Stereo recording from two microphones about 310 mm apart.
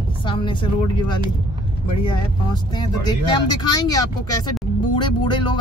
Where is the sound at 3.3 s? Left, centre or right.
Centre.